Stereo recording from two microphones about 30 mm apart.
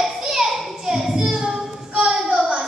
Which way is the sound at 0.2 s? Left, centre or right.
Centre.